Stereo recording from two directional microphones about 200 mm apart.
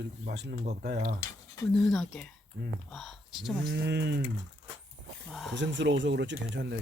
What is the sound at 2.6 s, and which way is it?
Speech, 55° right (ahead or behind).